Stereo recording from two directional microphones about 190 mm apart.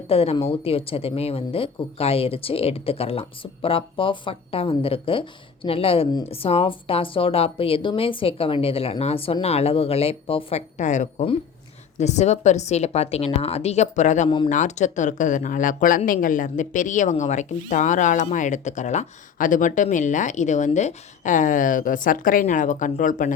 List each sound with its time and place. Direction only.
0.1 s speech: 30° left (ahead or behind)
14.3 s speech: 25° left (ahead or behind)
14.5 s speech: 40° left (ahead or behind)